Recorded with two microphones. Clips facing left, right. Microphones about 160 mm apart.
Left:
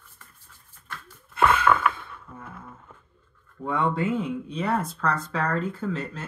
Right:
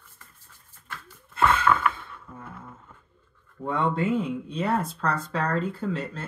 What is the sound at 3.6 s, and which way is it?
Speech, 25° right (ahead or behind).